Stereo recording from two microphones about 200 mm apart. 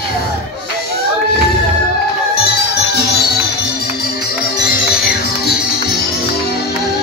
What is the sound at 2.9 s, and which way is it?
Music, 50° left (ahead or behind).